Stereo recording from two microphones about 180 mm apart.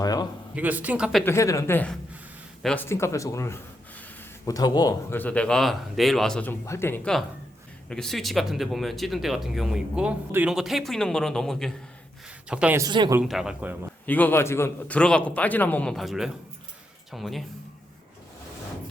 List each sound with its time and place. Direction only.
0.0 s a sound: 20° left (ahead or behind)
0.5 s speech: 10° right (ahead or behind)
1.2 s a man's voice: 15° left (ahead or behind)
5.1 s speech: 10° left (ahead or behind); by 12.8 s 5° right (ahead or behind)
12.8 s a man's voice: 20° right (ahead or behind)
13.2 s speech: centre (ahead or behind)
14.0 s a man's voice: 10° left (ahead or behind)